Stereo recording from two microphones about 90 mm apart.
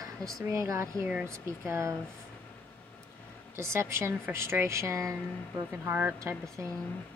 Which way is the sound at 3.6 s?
30° right (ahead or behind).